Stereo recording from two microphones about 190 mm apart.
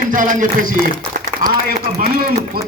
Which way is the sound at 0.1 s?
45° right (ahead or behind).